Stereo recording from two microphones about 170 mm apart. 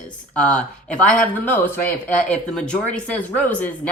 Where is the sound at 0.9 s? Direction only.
5° left (ahead or behind).